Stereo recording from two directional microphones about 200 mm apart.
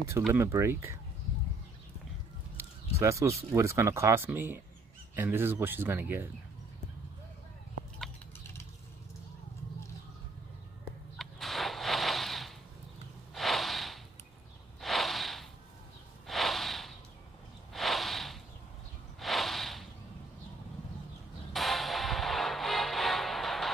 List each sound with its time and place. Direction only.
0.3 s speech: 15° right (ahead or behind)
2.5 s a sound: 15° right (ahead or behind)
3.5 s speech: 15° right (ahead or behind)
11.1 s a sound: centre (ahead or behind)
13.3 s snort: centre (ahead or behind)
21.5 s music: centre (ahead or behind)